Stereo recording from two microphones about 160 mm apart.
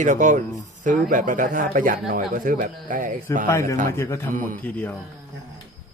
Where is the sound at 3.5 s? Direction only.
20° left (ahead or behind).